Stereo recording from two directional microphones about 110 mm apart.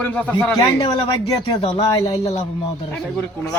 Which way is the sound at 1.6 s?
60° left (ahead or behind).